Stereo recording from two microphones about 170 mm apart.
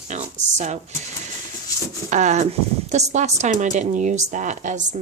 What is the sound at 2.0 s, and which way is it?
Speech, 45° right (ahead or behind).